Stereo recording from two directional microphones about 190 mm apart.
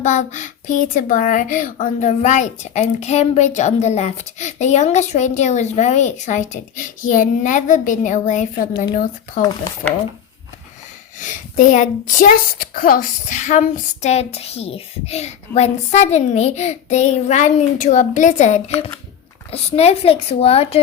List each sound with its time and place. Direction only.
0.0 s speech: 40° left (ahead or behind)
11.2 s speech: 40° left (ahead or behind)